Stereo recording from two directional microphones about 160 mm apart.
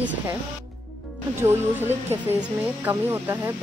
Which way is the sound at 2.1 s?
15° right (ahead or behind).